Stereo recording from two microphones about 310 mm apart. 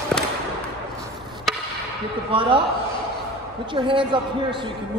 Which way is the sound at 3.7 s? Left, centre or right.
Centre.